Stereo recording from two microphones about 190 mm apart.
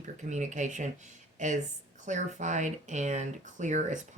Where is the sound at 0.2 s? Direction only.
40° right (ahead or behind).